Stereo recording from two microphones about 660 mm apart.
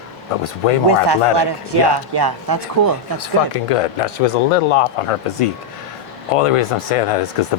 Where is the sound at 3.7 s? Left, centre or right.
Left.